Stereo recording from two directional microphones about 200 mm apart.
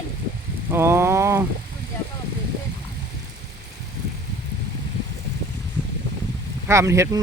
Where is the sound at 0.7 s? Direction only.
10° right (ahead or behind).